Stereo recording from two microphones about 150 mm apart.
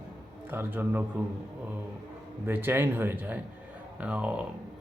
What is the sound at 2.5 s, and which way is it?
A man's voice, 15° right (ahead or behind).